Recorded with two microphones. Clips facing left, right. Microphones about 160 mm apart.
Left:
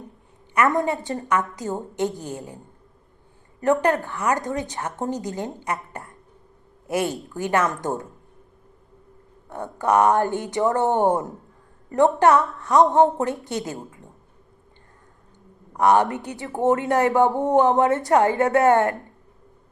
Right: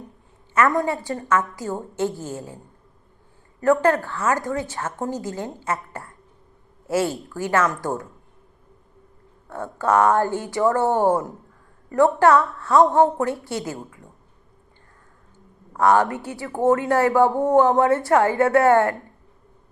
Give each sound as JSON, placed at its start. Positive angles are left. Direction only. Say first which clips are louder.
{"t": 0.5, "sound": "speech", "louder": "right 1 dB", "side_deg": 20}
{"t": 3.6, "sound": "a woman's voice", "louder": "right 2 dB", "side_deg": 20}
{"t": 9.5, "sound": "speech", "louder": "even", "side_deg": 20}
{"t": 15.7, "sound": "speech", "louder": "even", "side_deg": 20}